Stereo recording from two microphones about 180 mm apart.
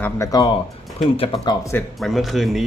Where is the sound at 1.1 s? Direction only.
30° left (ahead or behind).